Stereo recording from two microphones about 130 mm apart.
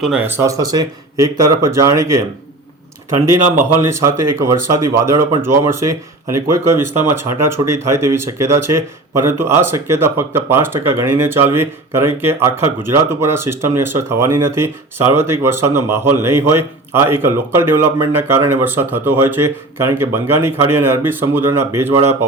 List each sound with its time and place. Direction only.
0.0 s speech: 5° right (ahead or behind)
0.3 s speech: 20° right (ahead or behind)
3.6 s speech: 20° right (ahead or behind)